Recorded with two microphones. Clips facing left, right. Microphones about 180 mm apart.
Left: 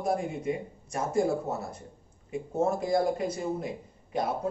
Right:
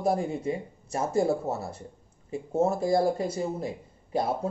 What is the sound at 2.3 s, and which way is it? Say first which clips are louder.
Speech: right 2 dB; 30° right (ahead or behind).